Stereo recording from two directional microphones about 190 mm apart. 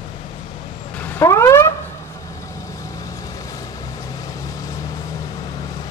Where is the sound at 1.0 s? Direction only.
15° left (ahead or behind).